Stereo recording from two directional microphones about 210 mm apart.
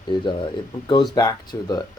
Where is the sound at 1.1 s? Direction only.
20° left (ahead or behind).